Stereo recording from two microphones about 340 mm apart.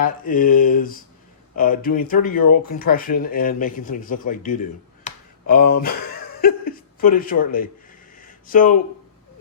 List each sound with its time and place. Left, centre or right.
0.0 s speech: left
5.0 s a sound: left
6.4 s speech: left